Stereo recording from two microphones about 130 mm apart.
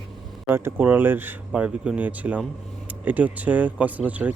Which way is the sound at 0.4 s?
20° right (ahead or behind).